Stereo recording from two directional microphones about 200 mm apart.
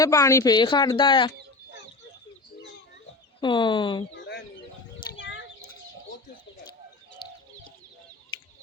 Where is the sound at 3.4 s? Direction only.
25° left (ahead or behind).